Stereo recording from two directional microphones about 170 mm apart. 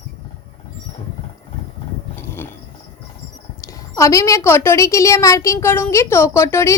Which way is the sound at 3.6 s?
20° left (ahead or behind).